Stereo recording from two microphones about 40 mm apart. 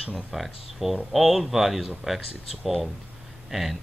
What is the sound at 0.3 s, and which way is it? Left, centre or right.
Speech, centre.